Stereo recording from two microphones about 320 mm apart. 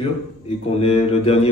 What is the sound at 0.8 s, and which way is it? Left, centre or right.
Speech, centre.